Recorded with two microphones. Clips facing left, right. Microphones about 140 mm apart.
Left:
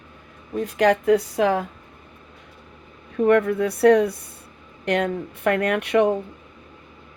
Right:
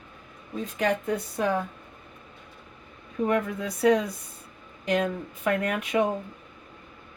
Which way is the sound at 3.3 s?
65° left (ahead or behind).